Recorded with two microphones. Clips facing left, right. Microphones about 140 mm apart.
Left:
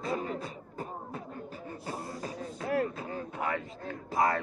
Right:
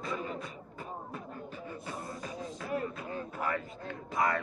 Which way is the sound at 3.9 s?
30° left (ahead or behind).